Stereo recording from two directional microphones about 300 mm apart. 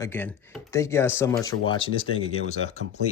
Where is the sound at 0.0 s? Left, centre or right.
Centre.